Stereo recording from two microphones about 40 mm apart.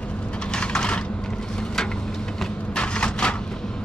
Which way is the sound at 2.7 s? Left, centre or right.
Left.